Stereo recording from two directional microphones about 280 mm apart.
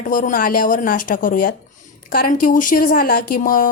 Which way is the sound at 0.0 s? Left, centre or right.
Left.